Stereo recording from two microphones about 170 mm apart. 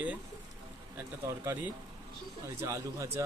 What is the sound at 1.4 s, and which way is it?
Speech, 10° right (ahead or behind).